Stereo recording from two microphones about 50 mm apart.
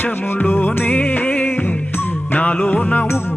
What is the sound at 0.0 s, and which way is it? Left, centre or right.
Music, left.